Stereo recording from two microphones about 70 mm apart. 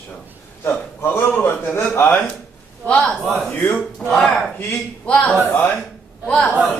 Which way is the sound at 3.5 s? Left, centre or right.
Left.